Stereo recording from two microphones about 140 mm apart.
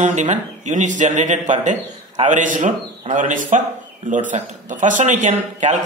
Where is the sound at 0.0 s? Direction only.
60° right (ahead or behind).